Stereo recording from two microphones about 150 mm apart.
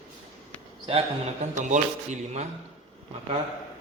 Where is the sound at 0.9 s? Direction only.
40° right (ahead or behind).